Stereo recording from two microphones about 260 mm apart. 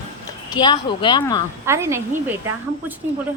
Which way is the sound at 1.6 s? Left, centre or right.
Centre.